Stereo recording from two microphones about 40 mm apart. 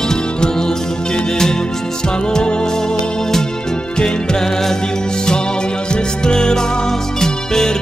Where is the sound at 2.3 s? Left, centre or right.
Left.